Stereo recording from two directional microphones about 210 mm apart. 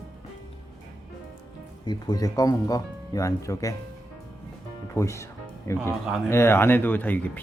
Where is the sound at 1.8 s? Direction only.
20° left (ahead or behind).